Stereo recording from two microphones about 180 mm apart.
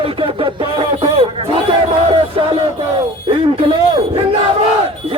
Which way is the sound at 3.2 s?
30° right (ahead or behind).